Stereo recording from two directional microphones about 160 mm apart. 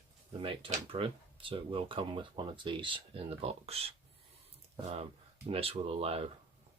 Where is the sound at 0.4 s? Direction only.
35° right (ahead or behind).